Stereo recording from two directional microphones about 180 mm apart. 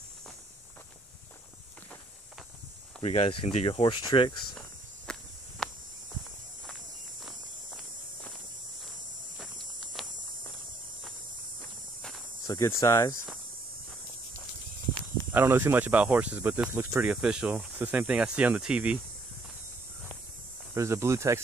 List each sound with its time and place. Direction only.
3.0 s speech: 35° left (ahead or behind)
5.1 s walk: 5° left (ahead or behind)
7.2 s walk: centre (ahead or behind)
12.4 s speech: 15° left (ahead or behind)
15.3 s speech: 15° right (ahead or behind)
20.7 s speech: 15° right (ahead or behind)